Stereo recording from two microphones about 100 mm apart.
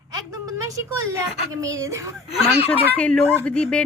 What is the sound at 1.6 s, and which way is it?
Speech, 35° right (ahead or behind).